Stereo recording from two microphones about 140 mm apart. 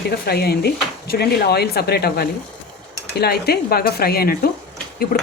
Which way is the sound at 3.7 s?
90° left.